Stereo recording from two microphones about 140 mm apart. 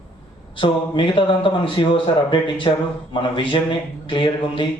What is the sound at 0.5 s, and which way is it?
A man's voice, 35° left (ahead or behind).